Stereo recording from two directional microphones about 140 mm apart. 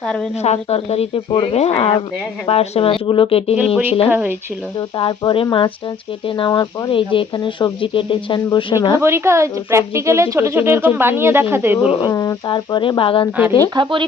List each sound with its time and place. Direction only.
0.0 s a woman's voice: 5° left (ahead or behind)
0.4 s speech: 50° left (ahead or behind)
4.1 s speech: 15° right (ahead or behind)
4.8 s speech: 35° left (ahead or behind)
9.0 s speech: 20° right (ahead or behind)
11.9 s speech: 40° left (ahead or behind)
12.1 s speech: 25° left (ahead or behind)
12.5 s speech: 35° left (ahead or behind)
13.7 s speech: 30° right (ahead or behind)